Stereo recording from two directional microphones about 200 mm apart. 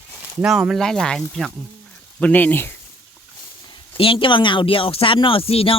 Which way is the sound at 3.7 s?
25° left (ahead or behind).